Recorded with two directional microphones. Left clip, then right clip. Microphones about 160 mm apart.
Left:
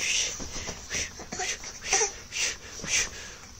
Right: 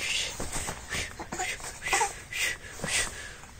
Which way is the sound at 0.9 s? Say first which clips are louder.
Left 1 dB; 35° left (ahead or behind).